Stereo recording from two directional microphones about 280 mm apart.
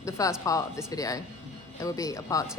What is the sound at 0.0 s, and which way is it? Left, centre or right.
A woman's voice, centre.